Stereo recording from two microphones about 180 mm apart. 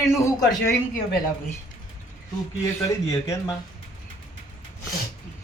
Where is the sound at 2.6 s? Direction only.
15° left (ahead or behind).